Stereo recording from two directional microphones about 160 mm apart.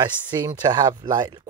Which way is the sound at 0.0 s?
25° right (ahead or behind).